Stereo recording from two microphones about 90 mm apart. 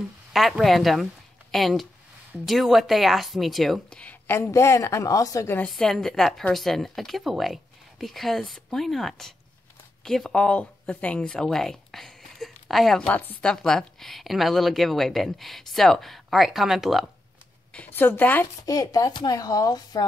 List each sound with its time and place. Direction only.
0.3 s a woman's voice: centre (ahead or behind)
4.0 s a sound: 15° left (ahead or behind)
4.4 s a woman's voice: 30° left (ahead or behind)
5.7 s a woman's voice: 5° left (ahead or behind)
13.1 s a woman's voice: 15° left (ahead or behind); by 17.0 s 5° right (ahead or behind)
17.7 s a woman's voice: 20° left (ahead or behind)
18.7 s speech: 40° left (ahead or behind)